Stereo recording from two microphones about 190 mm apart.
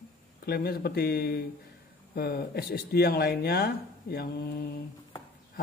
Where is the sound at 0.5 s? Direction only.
55° left (ahead or behind).